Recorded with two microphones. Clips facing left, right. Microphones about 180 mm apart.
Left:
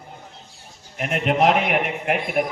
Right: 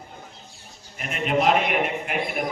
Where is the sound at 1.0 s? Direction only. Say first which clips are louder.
Left 4 dB; 65° left (ahead or behind).